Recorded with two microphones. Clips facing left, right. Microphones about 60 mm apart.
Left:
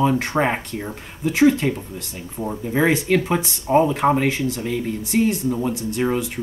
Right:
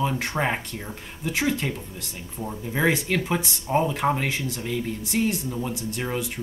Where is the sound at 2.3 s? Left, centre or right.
Centre.